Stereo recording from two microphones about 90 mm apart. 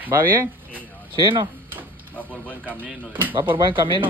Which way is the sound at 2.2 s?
15° left (ahead or behind).